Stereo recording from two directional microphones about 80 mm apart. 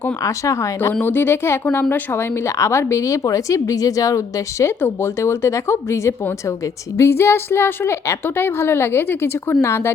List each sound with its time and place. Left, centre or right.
0.3 s a woman's voice: left
1.0 s a woman's voice: left
4.6 s a woman's voice: left